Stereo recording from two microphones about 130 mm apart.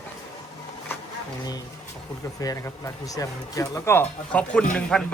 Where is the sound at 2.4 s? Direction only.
25° left (ahead or behind); by 5.0 s 5° left (ahead or behind).